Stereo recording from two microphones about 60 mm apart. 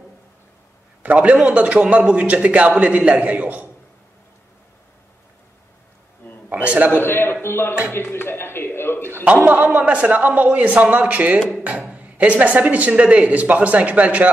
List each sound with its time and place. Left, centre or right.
1.0 s a man's voice: right
6.5 s a sound: right
6.9 s a man's voice: left
9.5 s a man's voice: right